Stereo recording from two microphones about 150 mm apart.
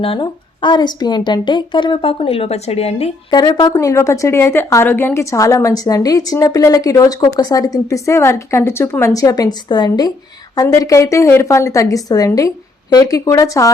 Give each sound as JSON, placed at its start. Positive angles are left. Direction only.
{"t": 0.0, "sound": "a woman's voice", "side_deg": 35}
{"t": 3.3, "sound": "a woman's voice", "side_deg": 30}